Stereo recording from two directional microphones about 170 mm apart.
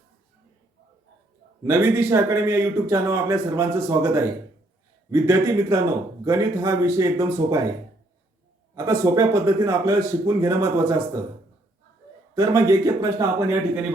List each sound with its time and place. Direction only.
1.6 s speech: 15° right (ahead or behind)
8.7 s speech: 20° right (ahead or behind)
12.3 s speech: 20° right (ahead or behind)